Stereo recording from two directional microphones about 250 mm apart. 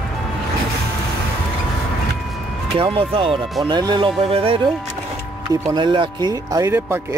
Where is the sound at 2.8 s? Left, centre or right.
Right.